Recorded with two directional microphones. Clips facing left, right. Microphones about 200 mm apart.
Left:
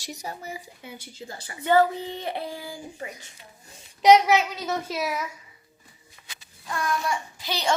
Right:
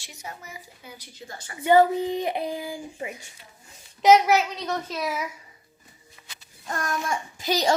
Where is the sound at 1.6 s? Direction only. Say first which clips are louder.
Right 3 dB; 15° right (ahead or behind).